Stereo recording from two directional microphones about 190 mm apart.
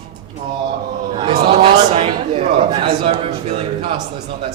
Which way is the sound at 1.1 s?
30° right (ahead or behind).